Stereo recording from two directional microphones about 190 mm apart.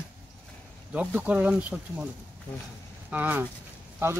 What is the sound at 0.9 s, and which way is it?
Speech, 5° right (ahead or behind).